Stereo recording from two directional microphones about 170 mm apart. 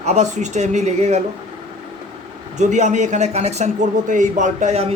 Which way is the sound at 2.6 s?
45° right (ahead or behind).